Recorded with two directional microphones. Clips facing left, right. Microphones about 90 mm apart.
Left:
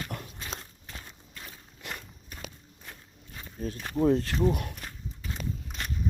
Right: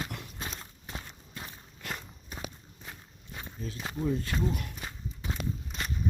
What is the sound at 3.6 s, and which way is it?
Speech, 50° left (ahead or behind).